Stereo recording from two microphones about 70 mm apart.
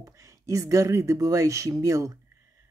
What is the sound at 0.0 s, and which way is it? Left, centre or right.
Speech, right.